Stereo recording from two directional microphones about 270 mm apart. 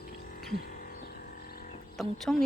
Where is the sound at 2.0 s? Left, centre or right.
Centre.